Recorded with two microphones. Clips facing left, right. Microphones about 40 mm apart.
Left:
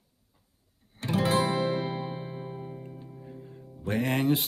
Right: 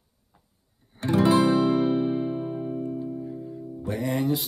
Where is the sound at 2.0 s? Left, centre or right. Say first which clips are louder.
Right 11 dB; centre.